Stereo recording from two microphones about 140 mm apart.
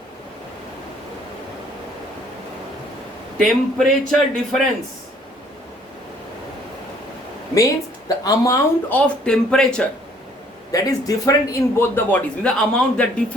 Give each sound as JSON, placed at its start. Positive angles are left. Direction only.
{"t": 3.3, "sound": "a man's voice", "side_deg": 0}
{"t": 7.5, "sound": "speech", "side_deg": 25}
{"t": 8.9, "sound": "a man's voice", "side_deg": 5}
{"t": 10.7, "sound": "a man's voice", "side_deg": 25}
{"t": 11.8, "sound": "a man's voice", "side_deg": 15}